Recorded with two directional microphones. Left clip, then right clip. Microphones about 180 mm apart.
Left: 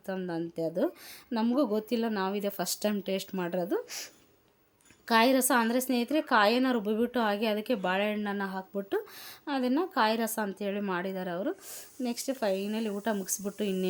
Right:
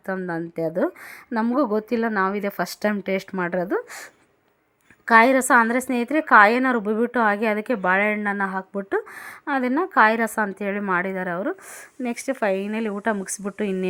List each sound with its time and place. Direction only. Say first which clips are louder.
0.0 s a woman's voice: right 7 dB; 25° right (ahead or behind)
5.0 s a woman's voice: right 9 dB; 20° right (ahead or behind)